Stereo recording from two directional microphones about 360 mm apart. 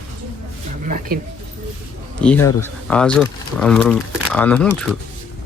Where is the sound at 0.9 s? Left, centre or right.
Right.